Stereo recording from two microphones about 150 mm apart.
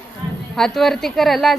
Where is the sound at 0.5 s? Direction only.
5° left (ahead or behind).